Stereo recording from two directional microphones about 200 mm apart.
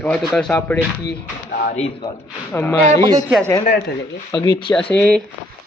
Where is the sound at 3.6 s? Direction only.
40° left (ahead or behind).